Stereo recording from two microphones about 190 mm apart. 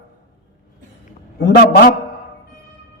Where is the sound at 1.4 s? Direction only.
60° left (ahead or behind).